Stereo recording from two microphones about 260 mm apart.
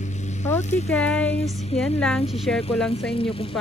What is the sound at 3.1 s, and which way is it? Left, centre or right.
Speech, left.